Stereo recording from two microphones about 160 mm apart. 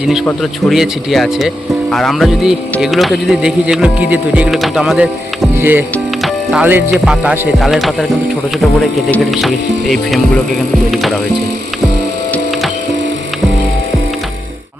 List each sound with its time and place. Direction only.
0.7 s speech: centre (ahead or behind)
6.2 s music: 5° right (ahead or behind)
6.9 s speech: 5° right (ahead or behind)
10.9 s speech: centre (ahead or behind)